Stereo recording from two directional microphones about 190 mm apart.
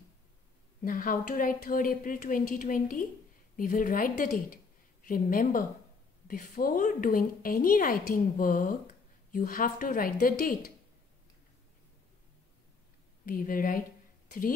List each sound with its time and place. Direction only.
0.8 s a woman's voice: 45° left (ahead or behind)
13.2 s a woman's voice: 45° left (ahead or behind)